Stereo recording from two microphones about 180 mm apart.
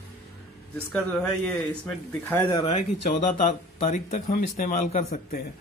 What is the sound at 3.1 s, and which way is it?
Speech, 45° left (ahead or behind).